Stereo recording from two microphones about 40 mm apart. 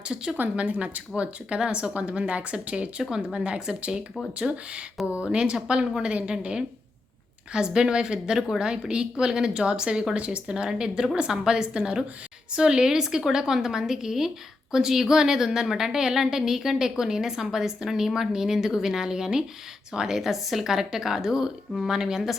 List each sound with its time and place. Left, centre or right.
0.5 s a woman's voice: right
10.2 s speech: right
10.4 s a woman's voice: centre